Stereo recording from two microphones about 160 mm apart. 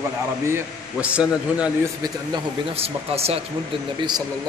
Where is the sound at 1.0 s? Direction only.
5° right (ahead or behind).